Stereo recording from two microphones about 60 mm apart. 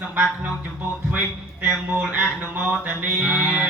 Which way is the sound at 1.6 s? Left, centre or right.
Right.